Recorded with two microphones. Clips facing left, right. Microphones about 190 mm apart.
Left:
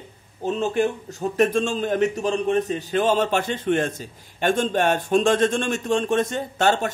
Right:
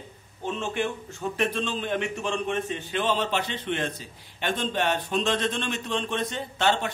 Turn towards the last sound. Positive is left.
turn(degrees=45)  # may be behind; listen again after turning